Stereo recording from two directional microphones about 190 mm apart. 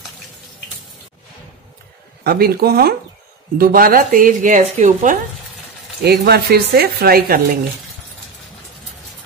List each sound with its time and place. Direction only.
2.2 s speech: 55° right (ahead or behind)
6.0 s speech: 55° right (ahead or behind)